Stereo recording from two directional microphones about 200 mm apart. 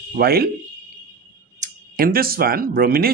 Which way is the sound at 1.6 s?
45° right (ahead or behind).